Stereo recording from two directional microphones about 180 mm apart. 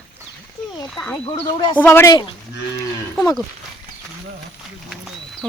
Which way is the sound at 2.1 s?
25° left (ahead or behind).